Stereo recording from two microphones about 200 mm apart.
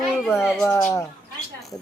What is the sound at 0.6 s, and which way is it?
Speech, 15° left (ahead or behind).